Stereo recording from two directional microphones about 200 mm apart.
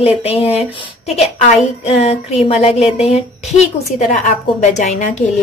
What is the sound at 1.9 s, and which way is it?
A woman's voice, 30° left (ahead or behind).